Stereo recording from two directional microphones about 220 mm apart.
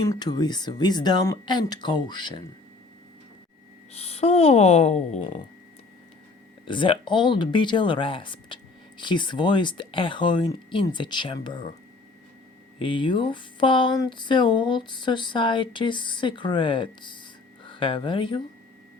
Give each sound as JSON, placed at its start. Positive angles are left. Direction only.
{"t": 0.0, "sound": "speech", "side_deg": 15}
{"t": 3.9, "sound": "speech", "side_deg": 30}
{"t": 6.7, "sound": "speech", "side_deg": 20}
{"t": 12.8, "sound": "speech", "side_deg": 20}